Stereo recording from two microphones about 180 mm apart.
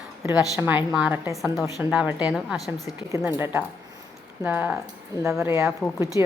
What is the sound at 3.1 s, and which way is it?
A woman's voice, 10° right (ahead or behind).